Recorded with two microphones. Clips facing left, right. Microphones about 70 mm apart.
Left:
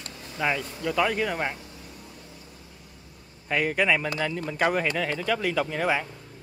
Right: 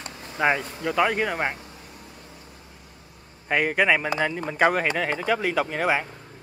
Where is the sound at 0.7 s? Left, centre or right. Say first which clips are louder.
Right 2 dB; right.